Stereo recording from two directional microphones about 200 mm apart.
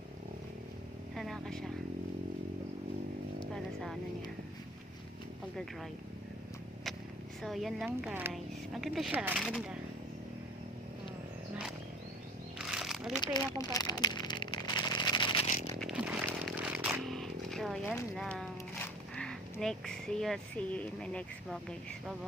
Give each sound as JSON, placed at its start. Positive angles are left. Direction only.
{"t": 1.1, "sound": "vehicle", "side_deg": 0}
{"t": 3.5, "sound": "vehicle", "side_deg": 0}
{"t": 7.4, "sound": "speech", "side_deg": 0}
{"t": 8.0, "sound": "speech", "side_deg": -10}
{"t": 12.5, "sound": "cat", "side_deg": -5}
{"t": 13.2, "sound": "a sound", "side_deg": 20}
{"t": 15.8, "sound": "chainsaw", "side_deg": -5}
{"t": 18.2, "sound": "speech", "side_deg": 0}